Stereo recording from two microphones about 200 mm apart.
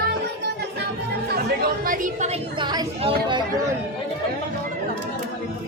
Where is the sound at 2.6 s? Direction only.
20° right (ahead or behind).